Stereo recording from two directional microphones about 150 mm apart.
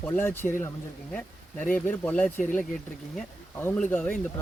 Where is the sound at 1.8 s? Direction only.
10° left (ahead or behind).